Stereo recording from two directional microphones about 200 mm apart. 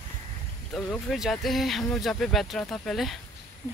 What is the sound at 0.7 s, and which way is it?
Speech, centre (ahead or behind).